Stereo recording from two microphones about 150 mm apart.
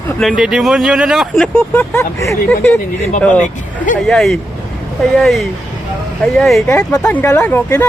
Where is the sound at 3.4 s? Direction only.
60° left (ahead or behind).